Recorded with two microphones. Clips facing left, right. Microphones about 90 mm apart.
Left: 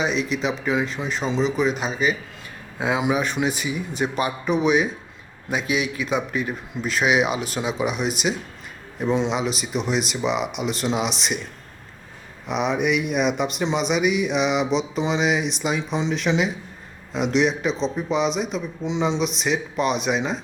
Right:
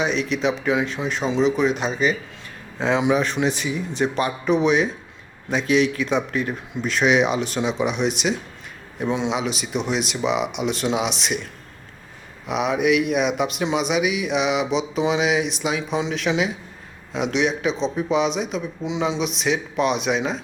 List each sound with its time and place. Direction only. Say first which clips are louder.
0.0 s speech: right 2 dB; centre (ahead or behind)
12.5 s speech: right 2 dB; centre (ahead or behind)